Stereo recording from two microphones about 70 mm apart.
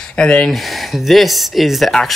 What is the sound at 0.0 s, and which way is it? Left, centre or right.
Speech, centre.